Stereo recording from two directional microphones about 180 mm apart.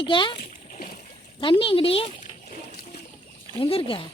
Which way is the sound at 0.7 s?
50° left (ahead or behind).